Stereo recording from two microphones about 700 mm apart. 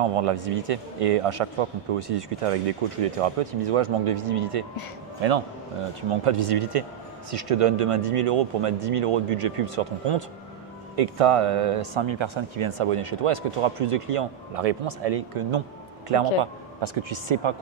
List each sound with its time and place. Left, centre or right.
0.0 s speech: right
5.2 s a man's voice: right
6.2 s speech: right